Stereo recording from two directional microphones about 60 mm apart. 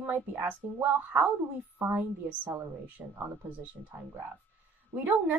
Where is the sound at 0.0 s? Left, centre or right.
Right.